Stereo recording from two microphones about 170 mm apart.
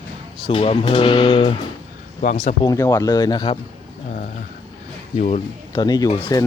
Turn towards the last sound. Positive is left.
turn(degrees=15)  # may be behind; listen again after turning